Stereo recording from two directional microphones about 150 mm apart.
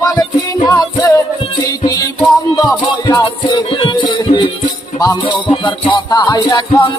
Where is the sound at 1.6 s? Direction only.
25° left (ahead or behind).